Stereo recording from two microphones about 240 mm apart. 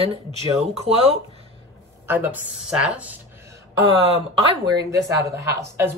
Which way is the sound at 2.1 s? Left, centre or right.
Centre.